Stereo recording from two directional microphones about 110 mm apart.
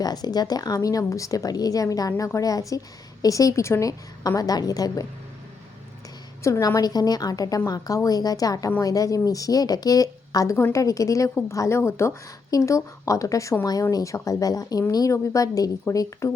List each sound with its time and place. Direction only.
0.0 s speech: 35° left (ahead or behind)
6.4 s speech: 30° left (ahead or behind)